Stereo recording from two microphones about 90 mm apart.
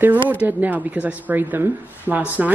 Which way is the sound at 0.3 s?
20° right (ahead or behind).